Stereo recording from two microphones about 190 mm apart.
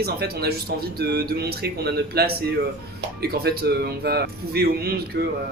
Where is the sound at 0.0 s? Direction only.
55° right (ahead or behind).